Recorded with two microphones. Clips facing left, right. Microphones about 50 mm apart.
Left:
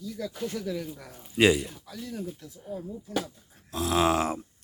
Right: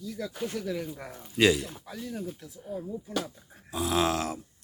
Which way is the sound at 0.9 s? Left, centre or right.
Right.